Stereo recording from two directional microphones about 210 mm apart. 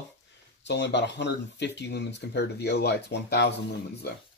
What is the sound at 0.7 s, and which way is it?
Speech, 55° left (ahead or behind).